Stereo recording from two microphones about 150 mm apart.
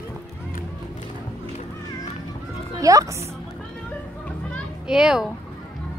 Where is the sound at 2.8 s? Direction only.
20° right (ahead or behind).